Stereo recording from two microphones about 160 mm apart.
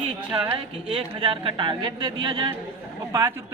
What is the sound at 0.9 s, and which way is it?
Speech, 35° right (ahead or behind).